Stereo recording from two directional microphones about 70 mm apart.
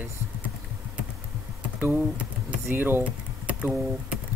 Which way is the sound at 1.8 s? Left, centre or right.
Right.